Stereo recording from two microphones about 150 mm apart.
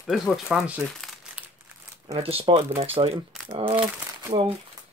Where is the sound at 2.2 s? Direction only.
40° right (ahead or behind).